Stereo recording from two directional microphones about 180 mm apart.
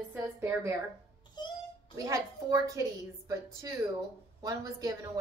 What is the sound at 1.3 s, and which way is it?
Wail, 25° left (ahead or behind).